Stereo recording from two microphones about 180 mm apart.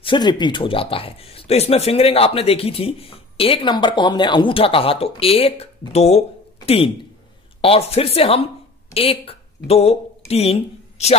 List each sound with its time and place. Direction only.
0.0 s speech: 25° left (ahead or behind)